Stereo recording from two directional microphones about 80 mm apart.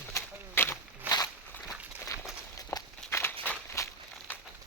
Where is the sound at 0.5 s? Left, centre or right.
Left.